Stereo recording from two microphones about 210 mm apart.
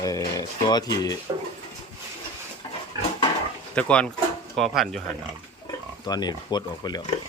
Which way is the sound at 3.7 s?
5° left (ahead or behind).